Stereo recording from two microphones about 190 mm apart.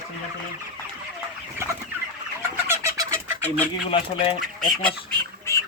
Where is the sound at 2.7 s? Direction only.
15° right (ahead or behind).